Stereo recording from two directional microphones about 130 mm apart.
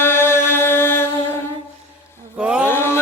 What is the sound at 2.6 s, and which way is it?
Mantra, 20° left (ahead or behind).